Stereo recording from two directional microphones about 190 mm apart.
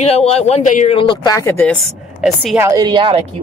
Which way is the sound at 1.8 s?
Centre (ahead or behind).